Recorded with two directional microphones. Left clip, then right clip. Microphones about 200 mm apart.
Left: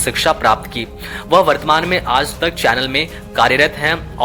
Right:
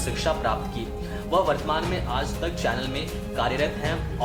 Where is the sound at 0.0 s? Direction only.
45° left (ahead or behind).